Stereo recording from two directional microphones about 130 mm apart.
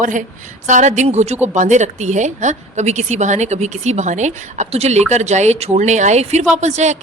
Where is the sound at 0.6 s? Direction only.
70° right (ahead or behind).